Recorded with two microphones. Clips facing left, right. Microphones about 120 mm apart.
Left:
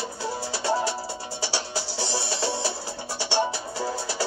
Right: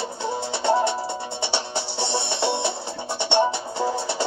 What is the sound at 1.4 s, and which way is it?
Music, 25° right (ahead or behind).